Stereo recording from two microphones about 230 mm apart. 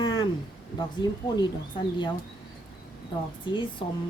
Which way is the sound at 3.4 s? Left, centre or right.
Left.